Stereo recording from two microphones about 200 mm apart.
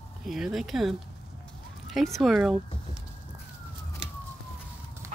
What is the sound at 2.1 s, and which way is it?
Speech, centre (ahead or behind).